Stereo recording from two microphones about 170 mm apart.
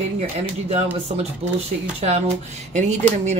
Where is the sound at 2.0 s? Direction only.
40° right (ahead or behind).